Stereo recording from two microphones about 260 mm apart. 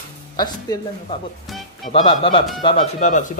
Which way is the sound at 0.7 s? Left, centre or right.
Centre.